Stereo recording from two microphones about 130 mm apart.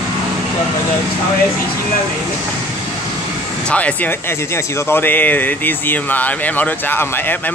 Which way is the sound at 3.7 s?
10° left (ahead or behind).